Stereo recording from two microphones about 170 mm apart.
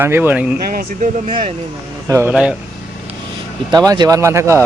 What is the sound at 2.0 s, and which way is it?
Speech, 15° right (ahead or behind).